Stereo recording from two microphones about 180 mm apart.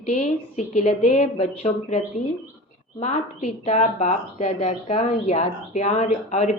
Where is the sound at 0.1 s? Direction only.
40° left (ahead or behind).